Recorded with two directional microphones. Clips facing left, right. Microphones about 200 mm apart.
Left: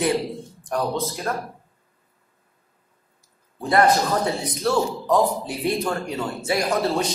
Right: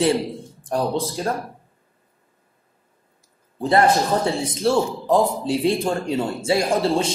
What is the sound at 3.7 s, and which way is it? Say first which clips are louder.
A man's voice: right 1 dB; 25° right (ahead or behind).